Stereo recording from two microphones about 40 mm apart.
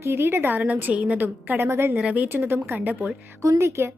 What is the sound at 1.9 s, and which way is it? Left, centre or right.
Speech, right.